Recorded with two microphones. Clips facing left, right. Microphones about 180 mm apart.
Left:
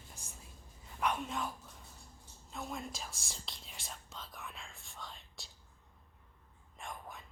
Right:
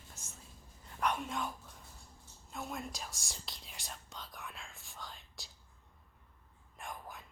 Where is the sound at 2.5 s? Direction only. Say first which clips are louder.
Even; centre (ahead or behind).